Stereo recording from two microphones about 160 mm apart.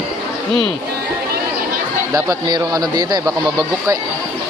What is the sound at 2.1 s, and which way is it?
A man's voice, 25° right (ahead or behind).